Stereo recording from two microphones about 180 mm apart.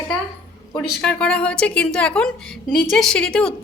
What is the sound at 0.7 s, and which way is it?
A woman's voice, 5° left (ahead or behind).